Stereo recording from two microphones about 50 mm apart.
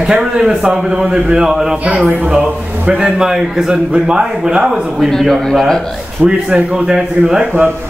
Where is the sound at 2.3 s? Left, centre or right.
Right.